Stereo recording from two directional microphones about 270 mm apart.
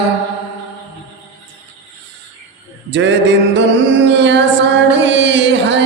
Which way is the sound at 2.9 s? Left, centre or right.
Right.